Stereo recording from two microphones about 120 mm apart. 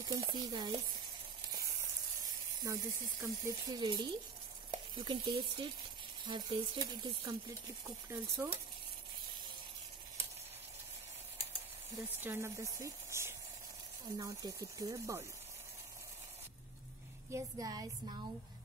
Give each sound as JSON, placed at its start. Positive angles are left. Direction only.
{"t": 0.0, "sound": "speech", "side_deg": -30}
{"t": 2.6, "sound": "speech", "side_deg": -25}
{"t": 12.2, "sound": "speech", "side_deg": -20}
{"t": 17.3, "sound": "speech", "side_deg": -30}